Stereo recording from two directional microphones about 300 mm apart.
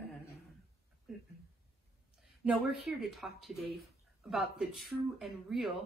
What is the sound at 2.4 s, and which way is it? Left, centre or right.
A woman's voice, centre.